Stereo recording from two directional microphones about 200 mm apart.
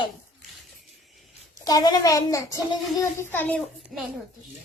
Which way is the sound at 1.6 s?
20° left (ahead or behind).